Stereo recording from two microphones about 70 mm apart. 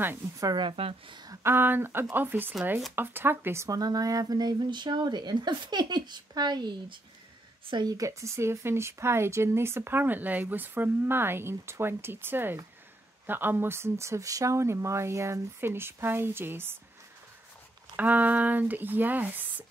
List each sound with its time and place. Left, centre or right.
0.4 s a woman's voice: right
1.4 s speech: right
3.7 s speech: right
7.7 s a woman's voice: right
8.0 s speech: right
17.9 s speech: right